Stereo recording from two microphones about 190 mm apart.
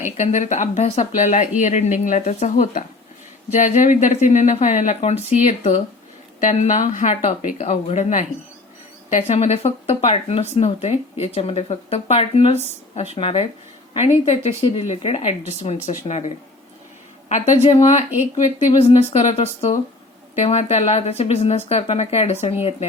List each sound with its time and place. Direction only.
0.0 s speech: 40° left (ahead or behind)